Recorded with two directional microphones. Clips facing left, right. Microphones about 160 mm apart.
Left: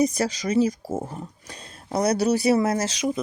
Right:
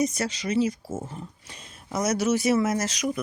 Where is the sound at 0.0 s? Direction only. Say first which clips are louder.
Left 4 dB; 40° left (ahead or behind).